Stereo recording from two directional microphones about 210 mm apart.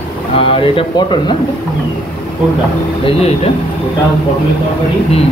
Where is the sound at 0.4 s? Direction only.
25° left (ahead or behind).